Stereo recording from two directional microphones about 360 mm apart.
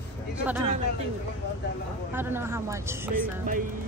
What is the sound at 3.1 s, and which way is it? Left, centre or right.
Speech, right.